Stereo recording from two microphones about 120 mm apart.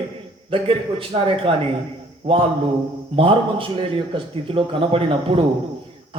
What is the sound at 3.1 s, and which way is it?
A man's voice, 50° right (ahead or behind).